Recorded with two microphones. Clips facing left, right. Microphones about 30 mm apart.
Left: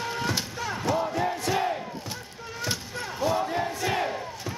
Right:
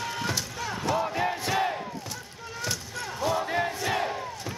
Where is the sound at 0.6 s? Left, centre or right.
Centre.